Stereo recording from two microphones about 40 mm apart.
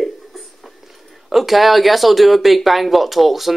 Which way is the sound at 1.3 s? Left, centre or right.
Centre.